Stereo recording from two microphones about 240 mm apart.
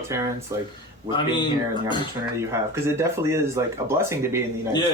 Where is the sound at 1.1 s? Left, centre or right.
Centre.